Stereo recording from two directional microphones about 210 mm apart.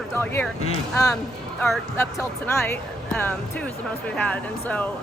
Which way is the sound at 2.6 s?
5° left (ahead or behind).